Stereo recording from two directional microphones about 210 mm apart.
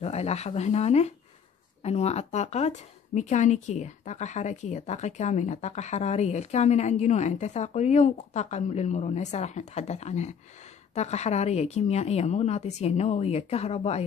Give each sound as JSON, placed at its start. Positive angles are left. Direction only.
{"t": 0.0, "sound": "speech", "side_deg": 30}